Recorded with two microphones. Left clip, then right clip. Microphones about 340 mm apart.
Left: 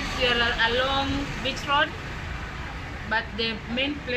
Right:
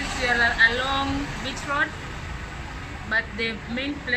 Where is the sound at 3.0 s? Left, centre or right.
Centre.